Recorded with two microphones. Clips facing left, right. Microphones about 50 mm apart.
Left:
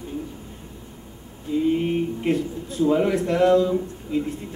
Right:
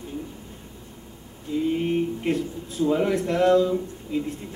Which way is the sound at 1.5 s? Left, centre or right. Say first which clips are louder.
Left 2 dB; centre.